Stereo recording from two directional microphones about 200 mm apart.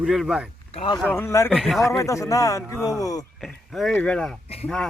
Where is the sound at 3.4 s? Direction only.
Centre (ahead or behind).